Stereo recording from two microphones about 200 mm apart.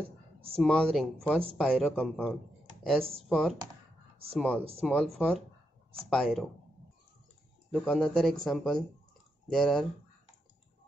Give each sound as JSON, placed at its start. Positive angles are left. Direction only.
{"t": 0.0, "sound": "a sound", "side_deg": -30}
{"t": 0.6, "sound": "speech", "side_deg": 0}
{"t": 7.7, "sound": "speech", "side_deg": 5}